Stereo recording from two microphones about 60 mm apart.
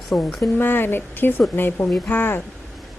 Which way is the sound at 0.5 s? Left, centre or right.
Left.